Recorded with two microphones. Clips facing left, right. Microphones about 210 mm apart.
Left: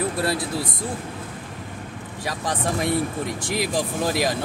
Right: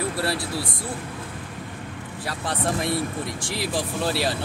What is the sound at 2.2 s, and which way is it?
Speech, 15° left (ahead or behind).